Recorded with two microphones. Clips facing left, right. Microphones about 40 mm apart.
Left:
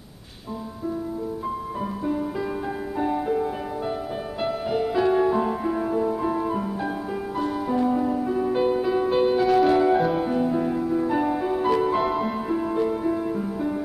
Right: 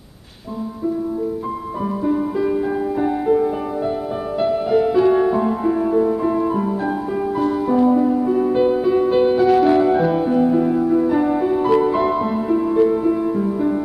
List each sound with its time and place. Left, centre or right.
2.0 s music: centre